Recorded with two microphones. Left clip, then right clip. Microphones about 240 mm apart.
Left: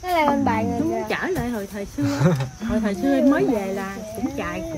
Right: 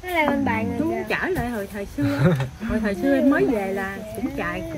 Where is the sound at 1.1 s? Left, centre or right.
Centre.